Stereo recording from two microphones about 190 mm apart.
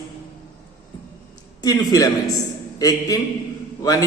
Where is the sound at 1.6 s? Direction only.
20° left (ahead or behind).